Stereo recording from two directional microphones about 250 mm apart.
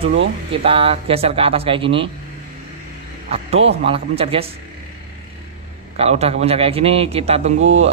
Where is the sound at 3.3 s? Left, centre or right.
Right.